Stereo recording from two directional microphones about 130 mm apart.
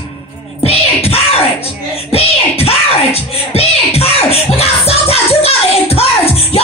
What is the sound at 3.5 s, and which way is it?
Music, 50° left (ahead or behind).